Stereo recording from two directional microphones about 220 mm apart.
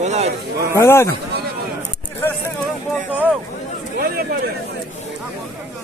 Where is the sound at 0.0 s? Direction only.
30° right (ahead or behind).